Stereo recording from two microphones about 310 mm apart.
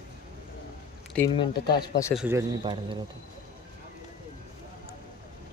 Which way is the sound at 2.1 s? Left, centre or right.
Centre.